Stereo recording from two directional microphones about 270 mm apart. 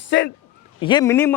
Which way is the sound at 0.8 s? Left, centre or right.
Centre.